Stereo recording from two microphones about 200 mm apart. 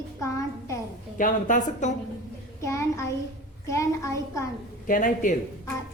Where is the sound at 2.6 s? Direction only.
15° left (ahead or behind).